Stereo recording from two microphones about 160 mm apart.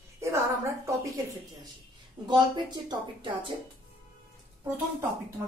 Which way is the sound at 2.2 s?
25° right (ahead or behind).